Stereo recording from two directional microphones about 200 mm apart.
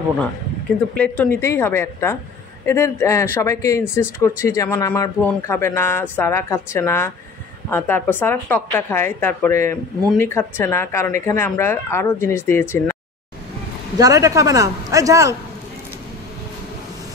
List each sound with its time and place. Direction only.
0.9 s speech: 5° left (ahead or behind)
13.9 s a man's voice: 15° right (ahead or behind)